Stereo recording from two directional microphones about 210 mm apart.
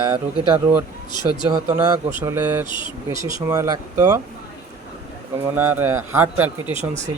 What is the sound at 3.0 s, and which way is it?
Speech, 15° right (ahead or behind).